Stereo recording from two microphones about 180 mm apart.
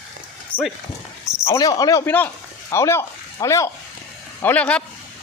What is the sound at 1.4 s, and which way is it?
Speech, 20° left (ahead or behind).